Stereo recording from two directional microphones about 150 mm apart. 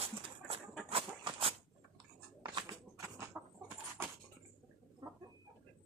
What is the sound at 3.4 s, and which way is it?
Chicken, 15° right (ahead or behind).